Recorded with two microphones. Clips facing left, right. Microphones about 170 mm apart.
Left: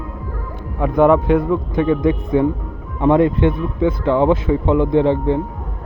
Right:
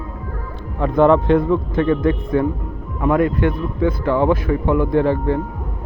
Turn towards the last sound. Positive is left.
turn(degrees=20)  # may be behind; listen again after turning